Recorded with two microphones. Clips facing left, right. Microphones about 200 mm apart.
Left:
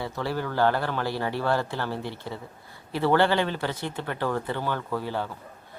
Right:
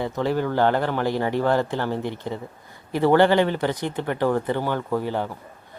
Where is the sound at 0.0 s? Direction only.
20° right (ahead or behind).